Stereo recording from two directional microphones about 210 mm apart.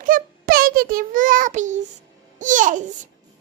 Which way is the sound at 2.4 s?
40° right (ahead or behind).